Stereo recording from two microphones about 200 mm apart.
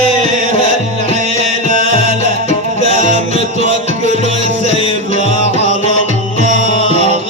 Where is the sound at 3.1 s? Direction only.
35° right (ahead or behind).